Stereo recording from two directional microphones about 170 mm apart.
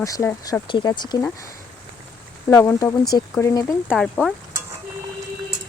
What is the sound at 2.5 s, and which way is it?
Speech, 20° left (ahead or behind).